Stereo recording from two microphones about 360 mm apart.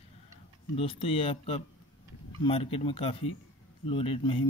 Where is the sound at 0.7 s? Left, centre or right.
Centre.